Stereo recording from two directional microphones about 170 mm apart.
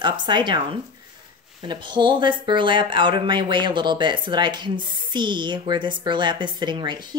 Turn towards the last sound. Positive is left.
turn(degrees=-25)  # may be behind; listen again after turning